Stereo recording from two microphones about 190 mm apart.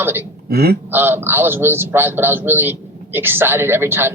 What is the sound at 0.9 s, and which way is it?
Speech, 10° right (ahead or behind).